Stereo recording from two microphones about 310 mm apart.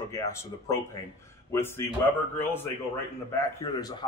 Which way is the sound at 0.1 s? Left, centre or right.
Centre.